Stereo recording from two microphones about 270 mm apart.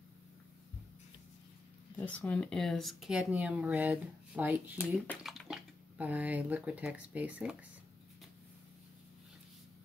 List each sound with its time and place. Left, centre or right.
2.1 s speech: centre